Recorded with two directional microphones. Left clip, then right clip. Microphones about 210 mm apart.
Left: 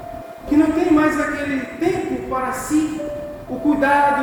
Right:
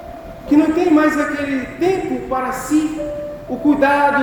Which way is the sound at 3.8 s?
30° right (ahead or behind).